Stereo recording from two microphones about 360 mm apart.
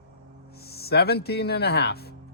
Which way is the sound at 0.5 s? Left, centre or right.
Left.